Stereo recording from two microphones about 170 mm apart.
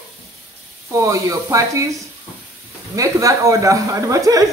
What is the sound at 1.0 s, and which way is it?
Speech, 20° right (ahead or behind).